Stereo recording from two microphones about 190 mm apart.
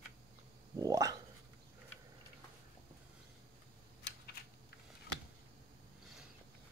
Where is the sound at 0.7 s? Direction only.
15° right (ahead or behind).